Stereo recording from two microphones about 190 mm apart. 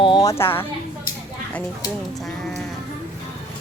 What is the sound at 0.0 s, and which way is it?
Speech, 20° left (ahead or behind).